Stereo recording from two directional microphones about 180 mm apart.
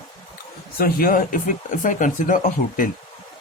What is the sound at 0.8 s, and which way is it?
Speech, 55° left (ahead or behind).